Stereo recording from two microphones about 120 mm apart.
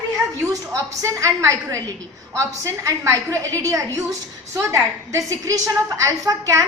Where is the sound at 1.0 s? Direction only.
25° right (ahead or behind).